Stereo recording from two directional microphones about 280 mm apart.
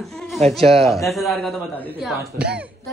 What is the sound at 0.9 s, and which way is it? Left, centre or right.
A woman's voice, centre.